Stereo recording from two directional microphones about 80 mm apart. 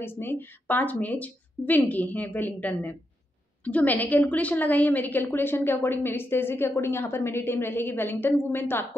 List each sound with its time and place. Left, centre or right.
0.0 s a woman's voice: left